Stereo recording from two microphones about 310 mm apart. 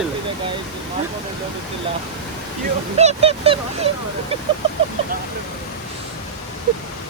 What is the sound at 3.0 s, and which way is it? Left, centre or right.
Speech, centre.